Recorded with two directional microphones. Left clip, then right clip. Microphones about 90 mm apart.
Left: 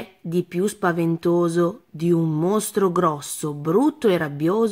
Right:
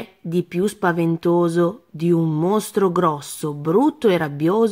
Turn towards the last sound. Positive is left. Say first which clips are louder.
# right 2 dB
turn(degrees=-20)  # may be behind; listen again after turning